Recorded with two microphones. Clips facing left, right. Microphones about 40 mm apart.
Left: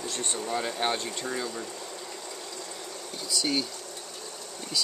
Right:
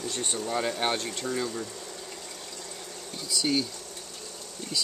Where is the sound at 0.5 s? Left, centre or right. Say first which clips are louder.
Right 1 dB; centre.